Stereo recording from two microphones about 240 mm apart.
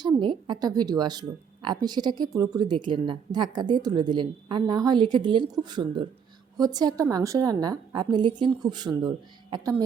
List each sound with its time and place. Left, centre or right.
0.0 s a woman's voice: centre